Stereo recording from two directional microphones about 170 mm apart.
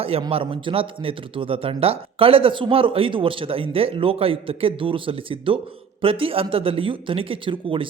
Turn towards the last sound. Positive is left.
turn(degrees=-30)  # may be behind; listen again after turning